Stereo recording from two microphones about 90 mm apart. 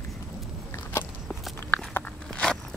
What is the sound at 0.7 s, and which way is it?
Biting, 30° left (ahead or behind).